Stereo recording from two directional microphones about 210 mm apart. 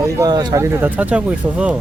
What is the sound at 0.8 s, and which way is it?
Speech, 5° right (ahead or behind).